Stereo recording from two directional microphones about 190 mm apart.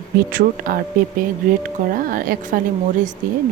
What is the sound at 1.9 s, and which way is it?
Speech, 50° right (ahead or behind).